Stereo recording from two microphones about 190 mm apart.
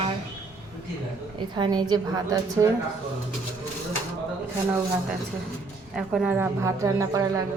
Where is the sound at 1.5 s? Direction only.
20° right (ahead or behind).